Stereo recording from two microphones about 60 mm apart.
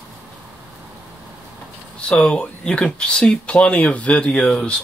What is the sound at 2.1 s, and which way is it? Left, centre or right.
Speech, centre.